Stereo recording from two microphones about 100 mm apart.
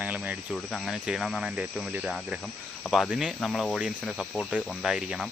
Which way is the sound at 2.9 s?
Centre (ahead or behind).